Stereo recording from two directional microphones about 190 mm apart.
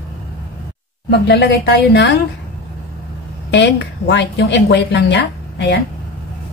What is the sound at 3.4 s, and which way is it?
A woman's voice, 65° left (ahead or behind).